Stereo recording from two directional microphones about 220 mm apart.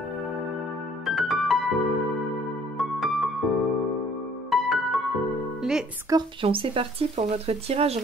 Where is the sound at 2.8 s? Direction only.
Centre (ahead or behind).